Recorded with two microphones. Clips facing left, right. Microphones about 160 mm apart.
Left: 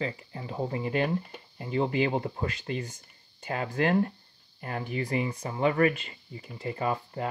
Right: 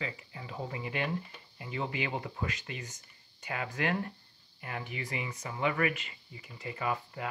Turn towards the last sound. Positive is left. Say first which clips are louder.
# left 5 dB
turn(degrees=35)  # may be behind; listen again after turning